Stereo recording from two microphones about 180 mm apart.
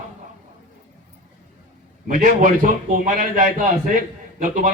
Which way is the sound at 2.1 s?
45° right (ahead or behind).